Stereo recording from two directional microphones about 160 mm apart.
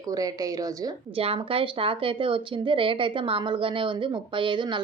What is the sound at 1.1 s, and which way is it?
A woman's voice, 35° right (ahead or behind).